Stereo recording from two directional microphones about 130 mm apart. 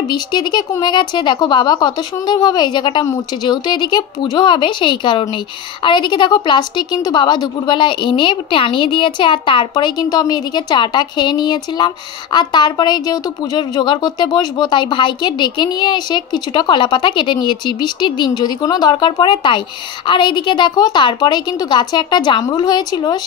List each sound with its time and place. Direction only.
0.1 s a woman's voice: 35° left (ahead or behind)